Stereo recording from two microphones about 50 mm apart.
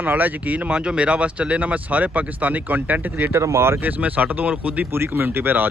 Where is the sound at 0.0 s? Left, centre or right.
Right.